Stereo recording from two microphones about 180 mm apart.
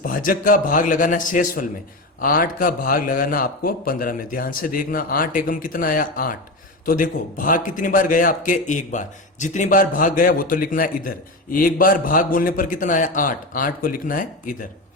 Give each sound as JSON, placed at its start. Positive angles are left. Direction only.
{"t": 0.0, "sound": "a man's voice", "side_deg": 50}